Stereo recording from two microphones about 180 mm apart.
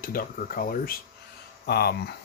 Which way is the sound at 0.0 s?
50° left (ahead or behind).